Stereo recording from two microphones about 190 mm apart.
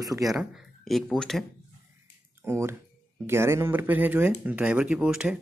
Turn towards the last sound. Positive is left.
turn(degrees=-5)  # may be behind; listen again after turning